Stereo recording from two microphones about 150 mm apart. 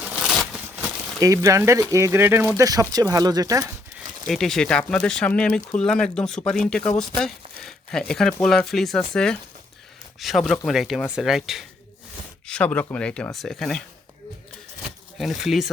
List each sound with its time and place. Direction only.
0.0 s a sound: 5° right (ahead or behind)
1.2 s speech: 20° right (ahead or behind)
4.3 s speech: centre (ahead or behind)
12.5 s speech: 10° left (ahead or behind)
15.2 s speech: centre (ahead or behind)